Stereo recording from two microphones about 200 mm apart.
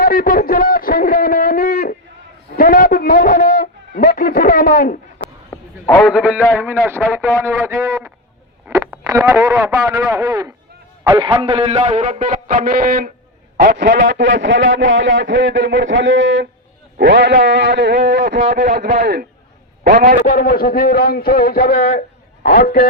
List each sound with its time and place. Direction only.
0.0 s a sound: 45° left (ahead or behind)
5.5 s a sound: 15° left (ahead or behind)
6.0 s a man's voice: 5° right (ahead or behind)
11.1 s a man's voice: 25° right (ahead or behind); by 13.1 s 45° right (ahead or behind)
13.7 s a man's voice: 55° right (ahead or behind); by 20.1 s 40° right (ahead or behind)
20.2 s a man's voice: 45° left (ahead or behind)